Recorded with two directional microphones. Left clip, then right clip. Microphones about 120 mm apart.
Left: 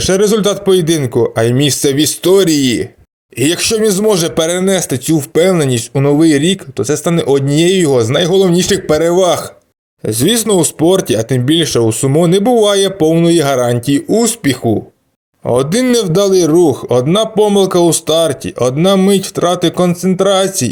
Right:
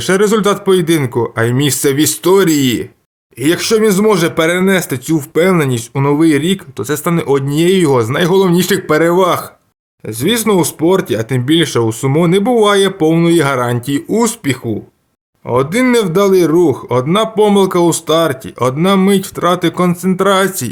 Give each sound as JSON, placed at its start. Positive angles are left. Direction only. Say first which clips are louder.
{"t": 0.0, "sound": "a man's voice", "louder": "even", "side_deg": 15}
{"t": 3.3, "sound": "a man's voice", "louder": "right 1 dB", "side_deg": 45}